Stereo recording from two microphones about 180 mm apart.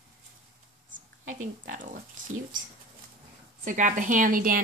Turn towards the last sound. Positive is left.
turn(degrees=-50)  # may be behind; listen again after turning